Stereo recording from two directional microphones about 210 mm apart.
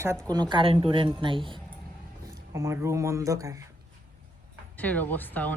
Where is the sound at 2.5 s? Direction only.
15° right (ahead or behind).